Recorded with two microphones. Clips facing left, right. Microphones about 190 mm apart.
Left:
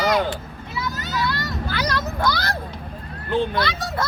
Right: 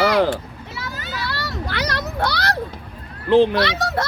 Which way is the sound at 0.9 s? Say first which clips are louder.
Left 4 dB; 40° left (ahead or behind).